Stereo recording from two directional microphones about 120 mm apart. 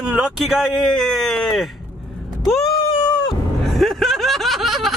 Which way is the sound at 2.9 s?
45° left (ahead or behind).